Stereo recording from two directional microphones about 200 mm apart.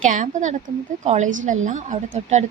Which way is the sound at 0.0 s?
40° right (ahead or behind).